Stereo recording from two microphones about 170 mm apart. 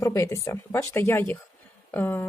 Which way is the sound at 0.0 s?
15° left (ahead or behind).